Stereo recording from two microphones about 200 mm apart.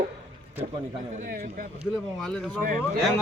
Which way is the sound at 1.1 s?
40° right (ahead or behind).